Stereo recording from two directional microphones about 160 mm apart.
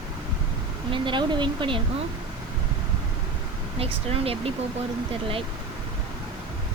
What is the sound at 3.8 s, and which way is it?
Child singing, 35° right (ahead or behind).